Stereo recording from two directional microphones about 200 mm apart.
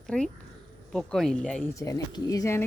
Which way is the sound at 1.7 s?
15° left (ahead or behind).